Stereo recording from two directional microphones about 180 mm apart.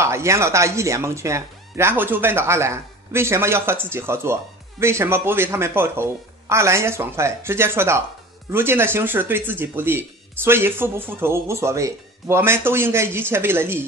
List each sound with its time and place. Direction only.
0.0 s speech: 15° right (ahead or behind)